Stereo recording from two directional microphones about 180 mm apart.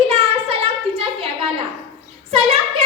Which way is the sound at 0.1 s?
35° right (ahead or behind).